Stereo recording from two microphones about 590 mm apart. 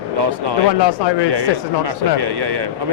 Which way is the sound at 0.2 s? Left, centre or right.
Right.